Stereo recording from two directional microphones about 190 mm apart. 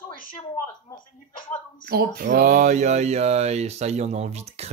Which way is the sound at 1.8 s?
50° right (ahead or behind).